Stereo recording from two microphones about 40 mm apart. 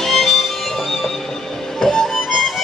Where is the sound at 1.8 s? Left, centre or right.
Centre.